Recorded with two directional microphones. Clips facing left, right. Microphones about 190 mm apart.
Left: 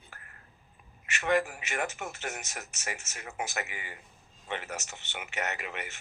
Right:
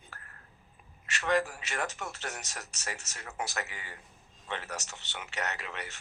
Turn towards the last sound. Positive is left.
turn(degrees=15)  # may be behind; listen again after turning